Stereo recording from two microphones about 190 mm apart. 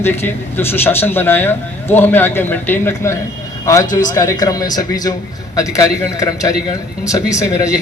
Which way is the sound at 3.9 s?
45° left (ahead or behind).